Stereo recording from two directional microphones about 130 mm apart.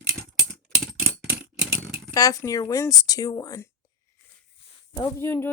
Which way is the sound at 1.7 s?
20° right (ahead or behind).